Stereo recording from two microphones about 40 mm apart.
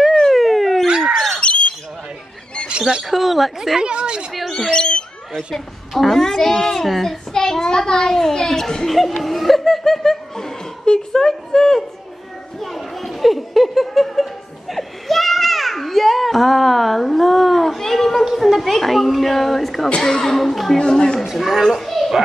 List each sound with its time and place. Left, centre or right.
0.1 s a sound: centre
0.8 s bird: right
1.1 s squawk: centre
3.0 s a woman's voice: centre
3.8 s speech: right
4.5 s speech: centre
12.5 s a sound: centre
18.2 s a woman's voice: centre
20.8 s speech: centre
21.2 s speech: centre
21.6 s children playing: centre